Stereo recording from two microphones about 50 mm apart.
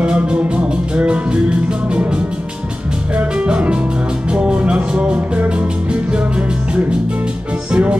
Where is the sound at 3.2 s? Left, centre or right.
Right.